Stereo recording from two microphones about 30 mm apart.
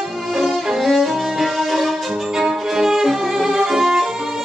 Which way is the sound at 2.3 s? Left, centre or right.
Centre.